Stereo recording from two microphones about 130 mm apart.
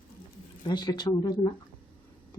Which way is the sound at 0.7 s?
35° left (ahead or behind).